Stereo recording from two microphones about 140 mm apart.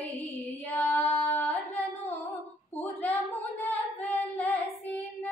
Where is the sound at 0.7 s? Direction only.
10° left (ahead or behind).